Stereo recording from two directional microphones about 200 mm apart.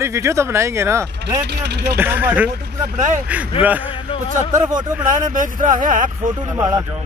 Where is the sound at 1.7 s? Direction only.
55° right (ahead or behind).